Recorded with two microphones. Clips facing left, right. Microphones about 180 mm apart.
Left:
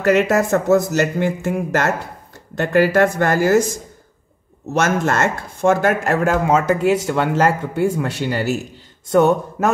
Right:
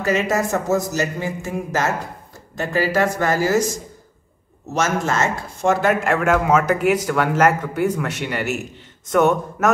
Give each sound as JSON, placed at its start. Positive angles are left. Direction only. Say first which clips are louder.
{"t": 0.0, "sound": "speech", "louder": "left 5 dB", "side_deg": 65}
{"t": 4.7, "sound": "speech", "louder": "left 3 dB", "side_deg": 60}